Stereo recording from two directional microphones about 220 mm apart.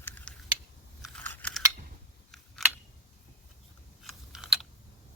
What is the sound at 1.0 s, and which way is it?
Biting, 5° left (ahead or behind).